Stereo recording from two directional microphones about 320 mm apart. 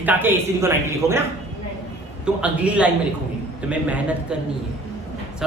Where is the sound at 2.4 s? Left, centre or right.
Centre.